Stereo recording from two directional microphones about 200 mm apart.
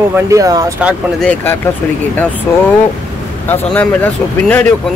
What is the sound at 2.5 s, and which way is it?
Speech, 10° left (ahead or behind).